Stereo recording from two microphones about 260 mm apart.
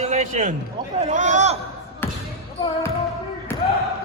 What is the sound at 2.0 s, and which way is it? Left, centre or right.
Basketball bounce, centre.